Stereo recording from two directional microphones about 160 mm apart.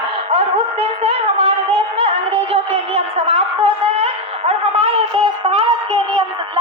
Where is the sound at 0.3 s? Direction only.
35° right (ahead or behind).